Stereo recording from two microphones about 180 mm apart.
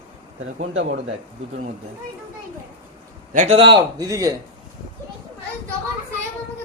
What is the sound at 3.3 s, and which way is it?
Speech, 45° right (ahead or behind).